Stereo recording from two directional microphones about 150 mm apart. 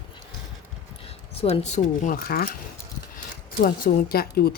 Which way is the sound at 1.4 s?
45° left (ahead or behind).